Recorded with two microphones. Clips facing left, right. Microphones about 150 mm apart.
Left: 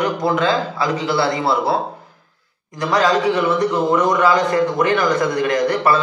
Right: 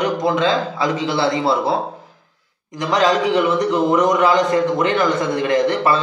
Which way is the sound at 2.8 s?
20° right (ahead or behind).